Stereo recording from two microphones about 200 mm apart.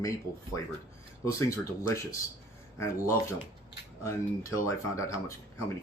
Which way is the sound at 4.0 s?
15° left (ahead or behind).